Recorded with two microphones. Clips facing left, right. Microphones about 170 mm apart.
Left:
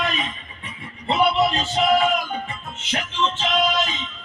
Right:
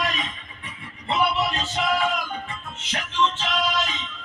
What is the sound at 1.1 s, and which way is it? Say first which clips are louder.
Music: left 4 dB; 25° left (ahead or behind).